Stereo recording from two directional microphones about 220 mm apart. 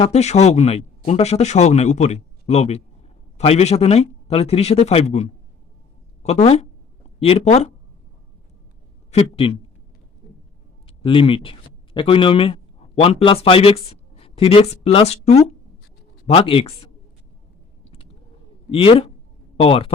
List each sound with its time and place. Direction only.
0.0 s speech: 30° left (ahead or behind)
9.1 s speech: 25° left (ahead or behind)
10.8 s speech: 25° left (ahead or behind)
18.7 s speech: 25° left (ahead or behind)